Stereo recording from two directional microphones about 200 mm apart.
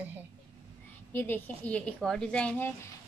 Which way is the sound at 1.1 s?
10° left (ahead or behind).